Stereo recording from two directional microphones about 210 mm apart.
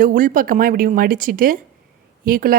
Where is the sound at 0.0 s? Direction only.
40° right (ahead or behind).